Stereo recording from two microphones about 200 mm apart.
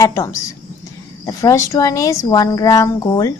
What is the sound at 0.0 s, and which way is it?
Speech, 15° left (ahead or behind).